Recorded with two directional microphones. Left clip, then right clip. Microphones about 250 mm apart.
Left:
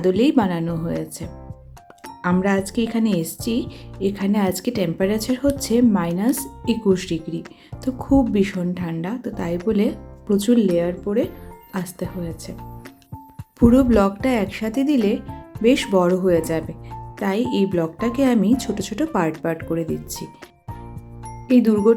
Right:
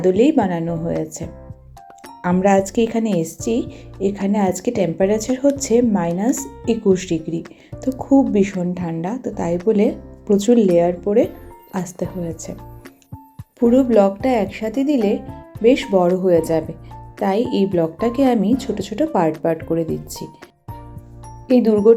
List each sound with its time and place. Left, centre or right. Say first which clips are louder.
0.0 s speech: right 3 dB; centre
13.6 s speech: right 2 dB; centre
21.5 s speech: right 4 dB; centre